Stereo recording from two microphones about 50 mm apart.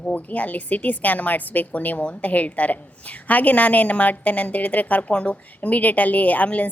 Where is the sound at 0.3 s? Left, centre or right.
Left.